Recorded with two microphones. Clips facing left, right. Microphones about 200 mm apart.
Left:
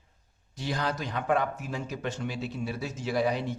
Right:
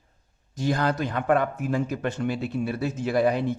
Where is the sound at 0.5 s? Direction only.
50° right (ahead or behind).